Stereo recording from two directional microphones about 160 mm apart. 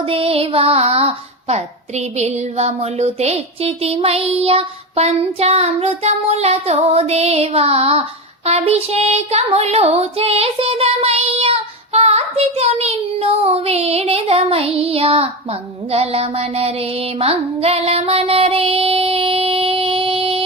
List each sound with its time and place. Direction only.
0.0 s child singing: 35° right (ahead or behind)